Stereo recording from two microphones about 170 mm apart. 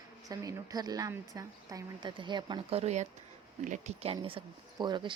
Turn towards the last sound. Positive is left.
turn(degrees=-25)  # may be behind; listen again after turning